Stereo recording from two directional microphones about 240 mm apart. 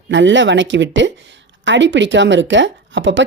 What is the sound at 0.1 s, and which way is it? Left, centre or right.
A woman's voice, right.